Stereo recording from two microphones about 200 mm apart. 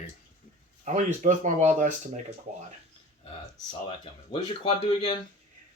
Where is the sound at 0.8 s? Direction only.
35° right (ahead or behind).